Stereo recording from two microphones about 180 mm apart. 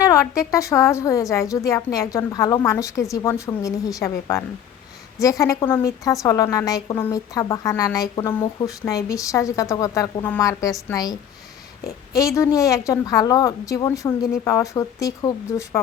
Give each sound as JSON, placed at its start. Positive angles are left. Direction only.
{"t": 0.0, "sound": "a woman's voice", "side_deg": 15}